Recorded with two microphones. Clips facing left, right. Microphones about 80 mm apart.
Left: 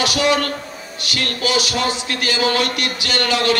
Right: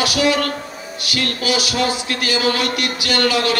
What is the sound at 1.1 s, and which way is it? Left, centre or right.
Music, left.